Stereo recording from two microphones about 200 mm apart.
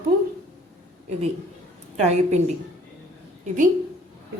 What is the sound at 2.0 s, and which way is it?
Speech, 35° right (ahead or behind).